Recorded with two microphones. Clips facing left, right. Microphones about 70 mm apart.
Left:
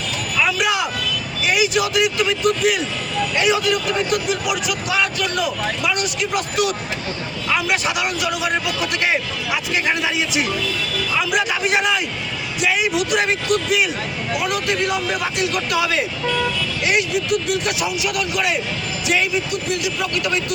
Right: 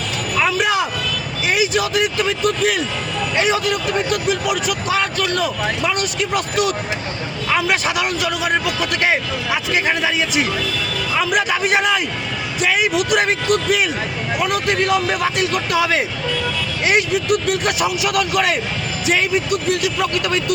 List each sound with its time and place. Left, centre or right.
0.3 s a sound: right
1.4 s vehicle: right
3.3 s speech: right